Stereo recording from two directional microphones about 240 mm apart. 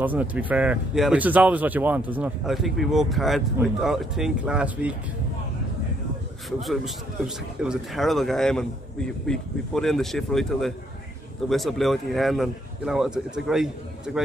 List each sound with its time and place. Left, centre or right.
0.0 s speech: centre
6.6 s speech: centre